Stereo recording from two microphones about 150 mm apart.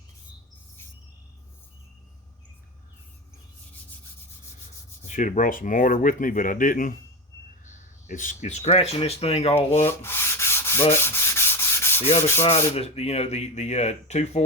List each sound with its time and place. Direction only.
5.0 s speech: 55° left (ahead or behind)
9.8 s sanding: 15° left (ahead or behind)
12.4 s speech: 45° left (ahead or behind)